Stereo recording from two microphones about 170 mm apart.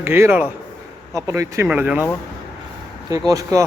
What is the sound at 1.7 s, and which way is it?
Speech, 5° right (ahead or behind).